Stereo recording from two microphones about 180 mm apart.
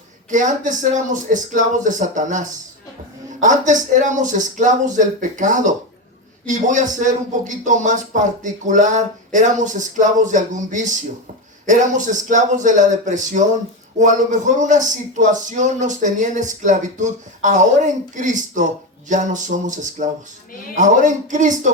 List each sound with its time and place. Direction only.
0.3 s a man's voice: 45° right (ahead or behind)
3.4 s a man's voice: 45° right (ahead or behind)